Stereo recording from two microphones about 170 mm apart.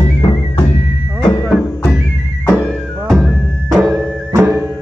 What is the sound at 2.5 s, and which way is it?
Music, 5° left (ahead or behind).